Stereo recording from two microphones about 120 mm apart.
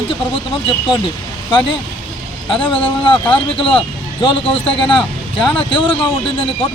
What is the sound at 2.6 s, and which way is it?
A man's voice, 45° left (ahead or behind).